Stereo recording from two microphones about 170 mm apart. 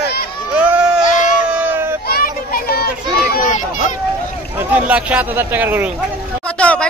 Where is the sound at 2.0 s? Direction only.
60° left (ahead or behind).